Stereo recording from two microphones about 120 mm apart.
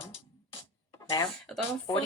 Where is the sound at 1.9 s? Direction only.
35° left (ahead or behind).